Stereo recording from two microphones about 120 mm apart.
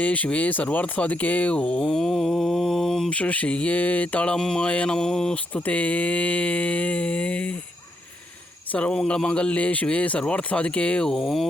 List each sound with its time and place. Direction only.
0.0 s speech: 10° left (ahead or behind)
8.7 s speech: 10° left (ahead or behind)